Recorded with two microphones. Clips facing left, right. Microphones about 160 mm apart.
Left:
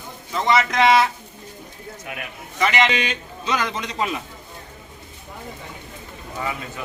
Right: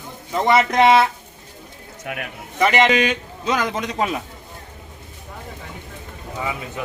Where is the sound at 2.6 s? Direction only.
45° right (ahead or behind).